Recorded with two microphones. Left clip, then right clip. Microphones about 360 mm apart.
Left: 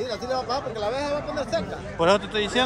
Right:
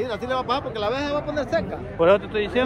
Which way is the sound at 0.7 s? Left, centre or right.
Right.